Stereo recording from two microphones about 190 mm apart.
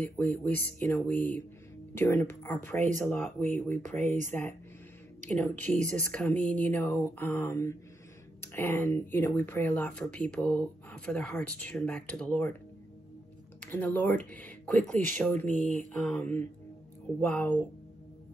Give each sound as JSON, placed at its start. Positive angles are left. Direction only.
{"t": 0.0, "sound": "speech", "side_deg": 10}
{"t": 3.3, "sound": "speech", "side_deg": -35}
{"t": 5.3, "sound": "speech", "side_deg": 5}
{"t": 5.8, "sound": "speech", "side_deg": -40}
{"t": 6.1, "sound": "speech", "side_deg": 5}
{"t": 13.6, "sound": "speech", "side_deg": 10}